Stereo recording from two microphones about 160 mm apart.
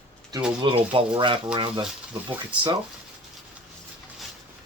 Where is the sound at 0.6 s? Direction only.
30° right (ahead or behind).